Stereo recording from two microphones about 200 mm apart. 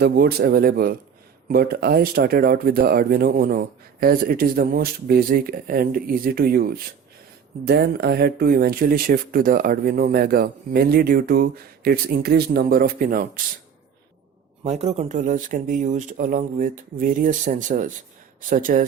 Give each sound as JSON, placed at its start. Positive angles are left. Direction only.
{"t": 0.0, "sound": "speech", "side_deg": -55}
{"t": 14.6, "sound": "speech", "side_deg": -35}